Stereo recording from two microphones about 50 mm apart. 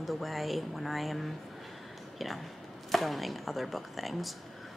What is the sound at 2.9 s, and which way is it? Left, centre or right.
Speech, centre.